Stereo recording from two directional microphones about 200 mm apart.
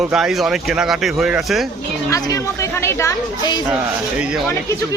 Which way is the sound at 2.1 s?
15° left (ahead or behind).